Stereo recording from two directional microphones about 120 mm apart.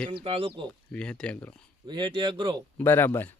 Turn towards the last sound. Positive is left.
turn(degrees=20)  # may be behind; listen again after turning